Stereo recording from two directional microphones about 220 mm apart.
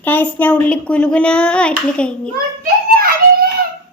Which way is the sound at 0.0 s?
10° left (ahead or behind).